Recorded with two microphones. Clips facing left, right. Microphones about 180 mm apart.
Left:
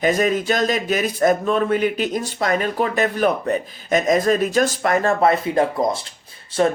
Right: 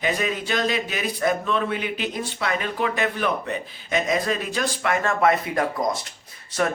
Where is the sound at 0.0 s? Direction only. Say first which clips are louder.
Left 7 dB; 45° left (ahead or behind).